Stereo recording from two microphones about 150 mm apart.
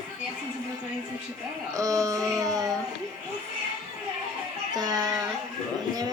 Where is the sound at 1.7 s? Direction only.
20° right (ahead or behind).